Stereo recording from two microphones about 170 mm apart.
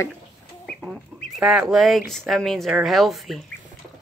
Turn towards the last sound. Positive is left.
turn(degrees=0)  # may be behind; listen again after turning